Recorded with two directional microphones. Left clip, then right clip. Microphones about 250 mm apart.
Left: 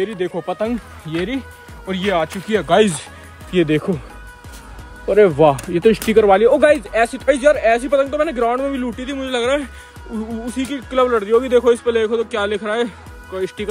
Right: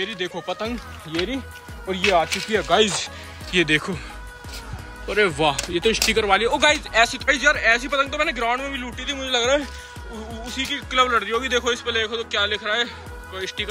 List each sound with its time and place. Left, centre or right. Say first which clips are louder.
0.0 s a man's voice: left 5 dB; left
1.9 s speech: even; left
3.5 s speech: left 3 dB; centre
5.0 s a man's voice: left 8 dB; centre